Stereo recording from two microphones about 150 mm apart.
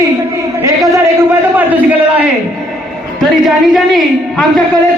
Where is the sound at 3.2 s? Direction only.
Centre (ahead or behind).